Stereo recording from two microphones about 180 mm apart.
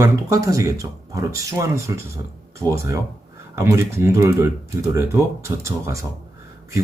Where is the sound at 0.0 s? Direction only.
15° right (ahead or behind).